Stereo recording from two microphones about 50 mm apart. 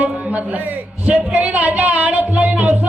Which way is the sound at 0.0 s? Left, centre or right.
Right.